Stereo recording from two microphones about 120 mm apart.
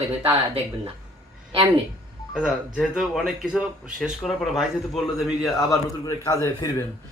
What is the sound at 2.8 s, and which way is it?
Speech, 5° right (ahead or behind).